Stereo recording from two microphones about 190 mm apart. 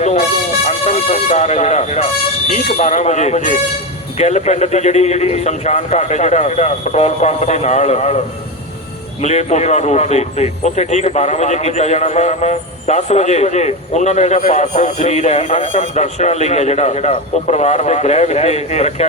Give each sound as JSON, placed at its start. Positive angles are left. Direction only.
{"t": 0.0, "sound": "vehicle", "side_deg": 35}
{"t": 2.5, "sound": "a man's voice", "side_deg": 40}
{"t": 9.2, "sound": "a man's voice", "side_deg": 35}